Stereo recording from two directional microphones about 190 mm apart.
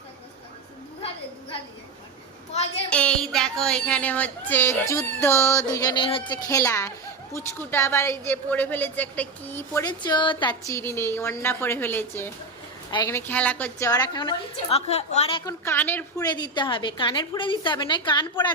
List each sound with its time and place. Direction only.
2.9 s a woman's voice: 5° left (ahead or behind); by 10.6 s 25° left (ahead or behind)
10.7 s a woman's voice: 15° left (ahead or behind); by 15.4 s 30° left (ahead or behind)
15.4 s a woman's voice: 10° left (ahead or behind)